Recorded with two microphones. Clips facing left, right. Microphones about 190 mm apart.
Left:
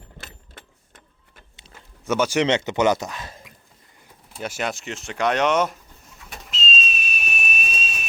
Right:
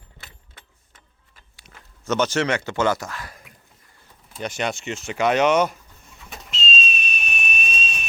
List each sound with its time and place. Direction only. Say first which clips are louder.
2.0 s speech: left 1 dB; 10° left (ahead or behind)
4.4 s speech: right 1 dB; 5° left (ahead or behind)
6.3 s whistle: right 1 dB; centre (ahead or behind)